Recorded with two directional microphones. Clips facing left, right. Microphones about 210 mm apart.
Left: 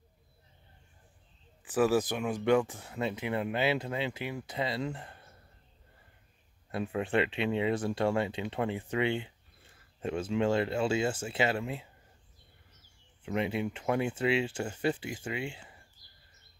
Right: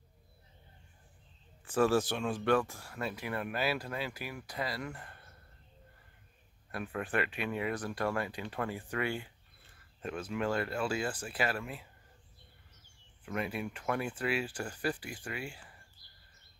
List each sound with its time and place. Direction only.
1.7 s speech: 15° left (ahead or behind)
6.7 s speech: 25° left (ahead or behind)
13.2 s speech: 25° left (ahead or behind)